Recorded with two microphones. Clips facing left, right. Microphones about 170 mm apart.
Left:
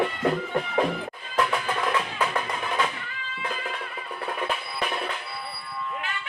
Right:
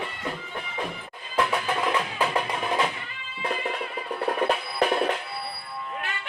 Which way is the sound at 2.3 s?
20° right (ahead or behind).